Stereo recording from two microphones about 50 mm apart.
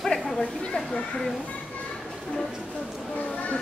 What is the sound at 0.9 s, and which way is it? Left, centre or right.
Speech, centre.